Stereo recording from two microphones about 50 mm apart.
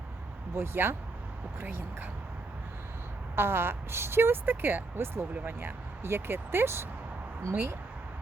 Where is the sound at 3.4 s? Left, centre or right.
Right.